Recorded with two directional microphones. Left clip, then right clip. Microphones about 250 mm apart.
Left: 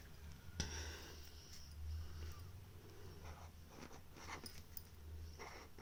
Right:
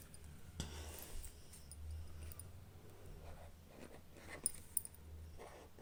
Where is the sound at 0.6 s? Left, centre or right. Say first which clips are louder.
Left 4 dB; centre.